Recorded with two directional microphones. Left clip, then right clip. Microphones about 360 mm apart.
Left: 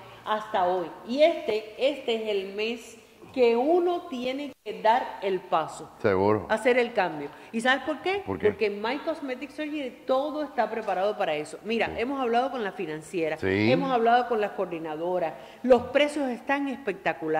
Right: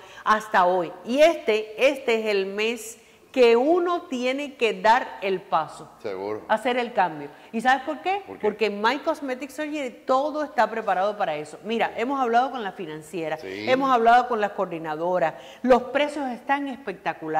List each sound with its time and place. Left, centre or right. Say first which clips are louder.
0.2 s a woman's voice: right 6 dB; right
6.0 s speech: left 7 dB; left
6.4 s a woman's voice: even; right
8.3 s a woman's voice: left 1 dB; left
8.5 s a woman's voice: right 5 dB; right; by 13.4 s centre
13.4 s speech: left 8 dB; left
13.7 s a woman's voice: right 6 dB; right
15.9 s a woman's voice: even; centre